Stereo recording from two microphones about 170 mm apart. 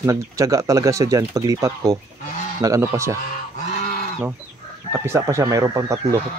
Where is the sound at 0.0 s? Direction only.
20° right (ahead or behind).